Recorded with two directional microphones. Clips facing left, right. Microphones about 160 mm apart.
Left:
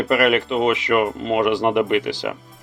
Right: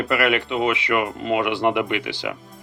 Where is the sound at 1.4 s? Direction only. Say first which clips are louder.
Left 4 dB; 40° left (ahead or behind).